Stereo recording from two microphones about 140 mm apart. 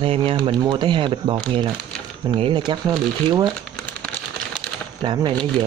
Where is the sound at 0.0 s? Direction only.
40° right (ahead or behind).